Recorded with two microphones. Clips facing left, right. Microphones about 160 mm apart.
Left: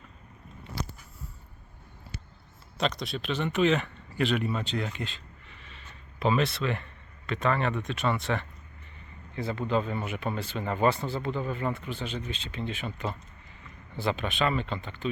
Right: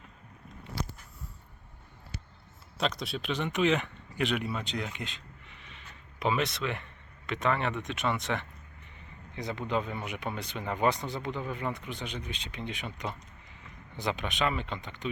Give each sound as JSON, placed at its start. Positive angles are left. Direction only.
{"t": 2.7, "sound": "speech", "side_deg": -5}